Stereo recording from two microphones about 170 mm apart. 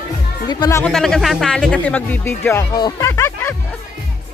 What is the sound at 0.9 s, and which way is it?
Speech, centre (ahead or behind).